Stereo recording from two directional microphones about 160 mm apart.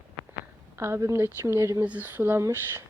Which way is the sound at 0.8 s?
20° right (ahead or behind).